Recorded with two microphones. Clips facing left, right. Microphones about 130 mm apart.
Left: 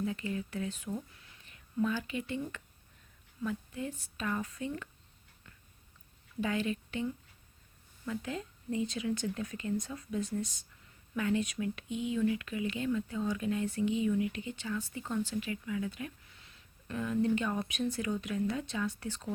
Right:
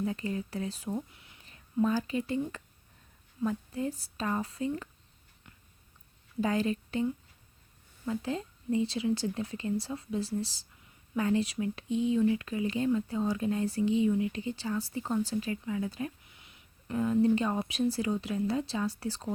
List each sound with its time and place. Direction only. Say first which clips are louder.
0.0 s a woman's voice: right 2 dB; 35° right (ahead or behind)
6.4 s speech: right 4 dB; 35° right (ahead or behind)
16.3 s a sound: right 1 dB; 15° right (ahead or behind)
17.9 s speech: right 3 dB; 30° right (ahead or behind)